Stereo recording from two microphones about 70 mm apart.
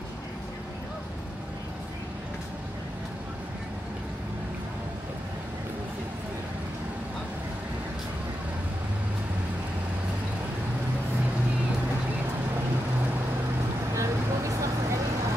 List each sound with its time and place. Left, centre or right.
13.9 s vehicle: right